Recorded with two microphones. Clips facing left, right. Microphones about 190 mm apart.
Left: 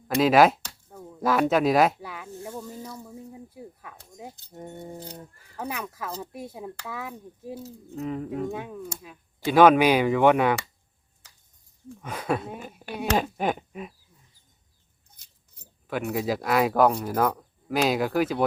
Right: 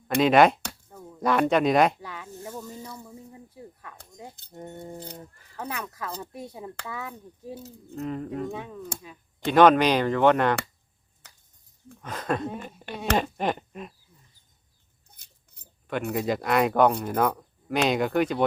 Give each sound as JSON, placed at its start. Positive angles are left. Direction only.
{"t": 0.2, "sound": "speech", "side_deg": 0}
{"t": 0.9, "sound": "a sound", "side_deg": 5}
{"t": 4.5, "sound": "speech", "side_deg": 5}
{"t": 11.2, "sound": "cricket", "side_deg": -60}
{"t": 11.9, "sound": "speech", "side_deg": 10}
{"t": 15.9, "sound": "speech", "side_deg": 0}